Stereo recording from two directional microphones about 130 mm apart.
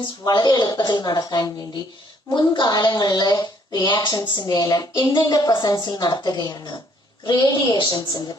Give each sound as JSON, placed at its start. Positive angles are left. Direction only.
{"t": 0.3, "sound": "a woman's voice", "side_deg": 35}